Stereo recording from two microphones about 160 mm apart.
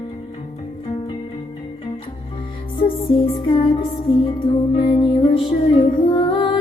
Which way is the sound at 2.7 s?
35° left (ahead or behind).